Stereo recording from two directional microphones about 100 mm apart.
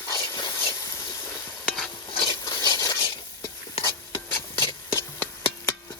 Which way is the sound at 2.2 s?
40° left (ahead or behind).